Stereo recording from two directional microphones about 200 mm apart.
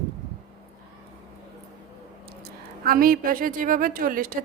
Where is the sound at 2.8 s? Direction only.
45° right (ahead or behind).